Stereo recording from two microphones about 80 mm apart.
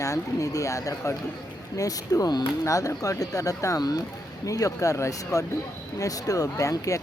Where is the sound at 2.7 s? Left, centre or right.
Left.